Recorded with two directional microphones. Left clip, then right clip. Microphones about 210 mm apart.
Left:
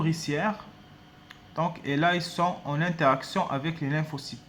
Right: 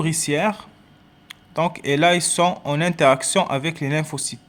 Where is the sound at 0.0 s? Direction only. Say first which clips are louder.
Right 7 dB; 45° right (ahead or behind).